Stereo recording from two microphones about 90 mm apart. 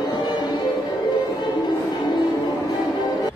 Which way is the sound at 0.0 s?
50° left (ahead or behind).